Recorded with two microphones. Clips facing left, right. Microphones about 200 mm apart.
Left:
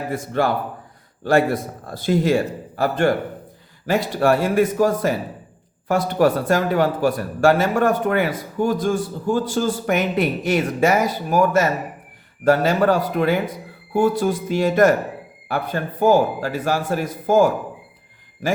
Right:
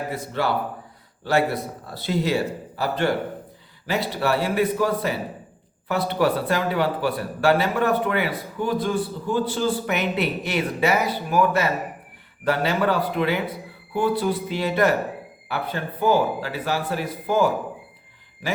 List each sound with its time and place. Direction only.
0.1 s speech: 50° left (ahead or behind)